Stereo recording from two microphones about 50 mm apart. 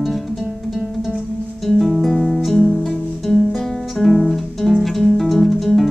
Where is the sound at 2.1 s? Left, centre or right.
Centre.